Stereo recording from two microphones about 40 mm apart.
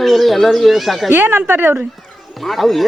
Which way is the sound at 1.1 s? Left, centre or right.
Right.